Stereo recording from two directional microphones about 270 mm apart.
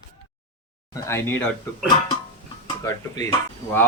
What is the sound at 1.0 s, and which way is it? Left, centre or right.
Speech, centre.